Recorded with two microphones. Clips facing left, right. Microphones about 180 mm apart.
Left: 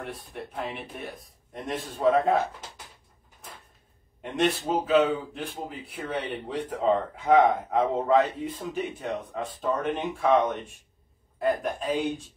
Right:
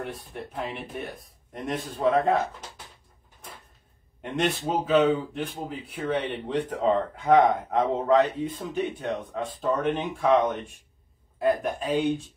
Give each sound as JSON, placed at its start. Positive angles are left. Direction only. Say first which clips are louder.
{"t": 0.0, "sound": "speech", "louder": "right 2 dB", "side_deg": 0}
{"t": 4.2, "sound": "speech", "louder": "left 1 dB", "side_deg": 0}